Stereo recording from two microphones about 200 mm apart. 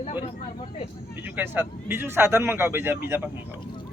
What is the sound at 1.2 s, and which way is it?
A man's voice, 10° right (ahead or behind).